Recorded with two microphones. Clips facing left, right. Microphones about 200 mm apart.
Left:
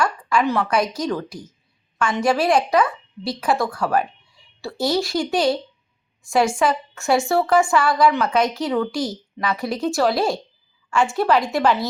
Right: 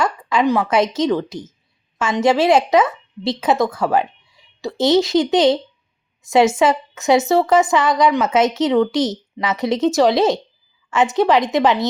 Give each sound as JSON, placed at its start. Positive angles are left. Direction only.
{"t": 0.0, "sound": "a woman's voice", "side_deg": -20}